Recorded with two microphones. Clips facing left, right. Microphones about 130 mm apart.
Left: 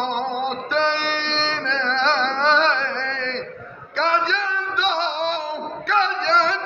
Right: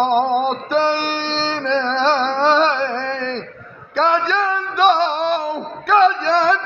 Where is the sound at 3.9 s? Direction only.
50° right (ahead or behind).